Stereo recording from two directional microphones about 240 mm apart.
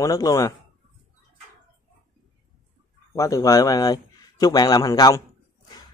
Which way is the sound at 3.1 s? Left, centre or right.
Centre.